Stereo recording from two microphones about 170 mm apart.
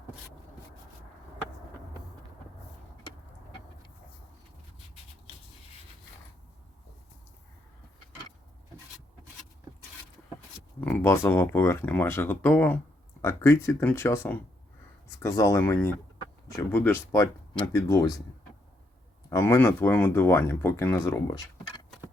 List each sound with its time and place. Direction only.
10.8 s speech: 10° left (ahead or behind)
19.3 s speech: 15° left (ahead or behind)